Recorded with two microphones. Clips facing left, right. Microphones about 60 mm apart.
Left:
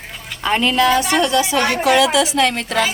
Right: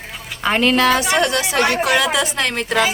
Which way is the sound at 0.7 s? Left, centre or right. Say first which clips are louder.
Left 1 dB; right.